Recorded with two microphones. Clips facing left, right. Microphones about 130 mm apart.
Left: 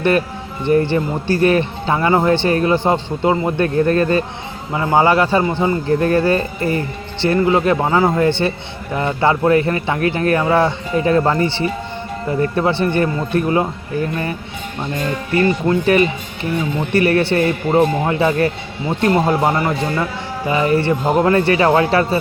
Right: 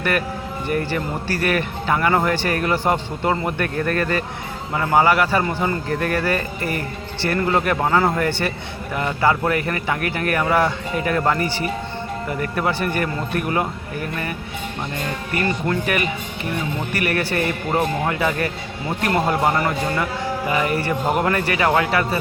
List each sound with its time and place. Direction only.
0.7 s a man's voice: 25° left (ahead or behind)